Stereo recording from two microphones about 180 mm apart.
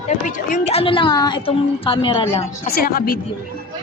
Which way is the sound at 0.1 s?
45° left (ahead or behind).